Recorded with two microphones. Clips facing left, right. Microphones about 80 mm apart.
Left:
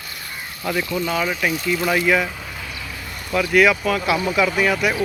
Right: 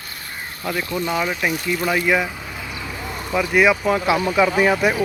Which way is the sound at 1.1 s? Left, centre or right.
Centre.